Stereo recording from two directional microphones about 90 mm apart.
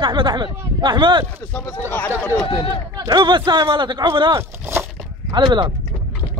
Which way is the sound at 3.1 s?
55° right (ahead or behind).